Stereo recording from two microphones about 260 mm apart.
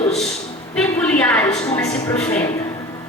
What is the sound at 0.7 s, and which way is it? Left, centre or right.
Speech, centre.